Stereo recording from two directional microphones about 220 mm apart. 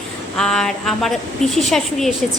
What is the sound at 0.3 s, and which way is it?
A woman's voice, 5° left (ahead or behind).